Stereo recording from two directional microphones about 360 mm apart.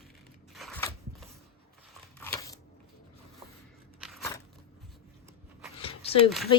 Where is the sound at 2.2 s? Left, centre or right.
Centre.